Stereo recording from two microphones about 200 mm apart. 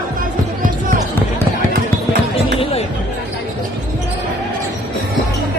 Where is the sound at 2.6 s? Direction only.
30° left (ahead or behind).